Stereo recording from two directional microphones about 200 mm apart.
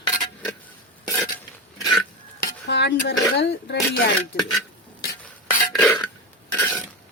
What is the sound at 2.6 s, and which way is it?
Speech, 60° left (ahead or behind).